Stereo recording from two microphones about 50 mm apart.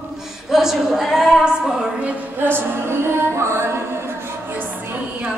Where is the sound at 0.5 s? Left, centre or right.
Centre.